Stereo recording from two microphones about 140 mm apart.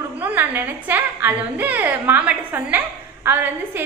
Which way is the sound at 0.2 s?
15° right (ahead or behind).